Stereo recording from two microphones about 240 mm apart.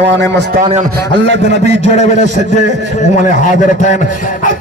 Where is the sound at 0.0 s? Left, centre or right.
Right.